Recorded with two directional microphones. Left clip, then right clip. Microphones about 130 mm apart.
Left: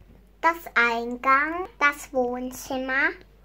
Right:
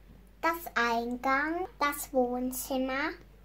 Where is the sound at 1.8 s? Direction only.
35° left (ahead or behind).